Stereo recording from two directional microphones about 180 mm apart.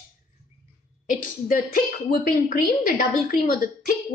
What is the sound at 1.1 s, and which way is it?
A woman's voice, 50° left (ahead or behind).